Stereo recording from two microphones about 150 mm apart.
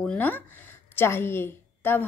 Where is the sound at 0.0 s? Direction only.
10° left (ahead or behind).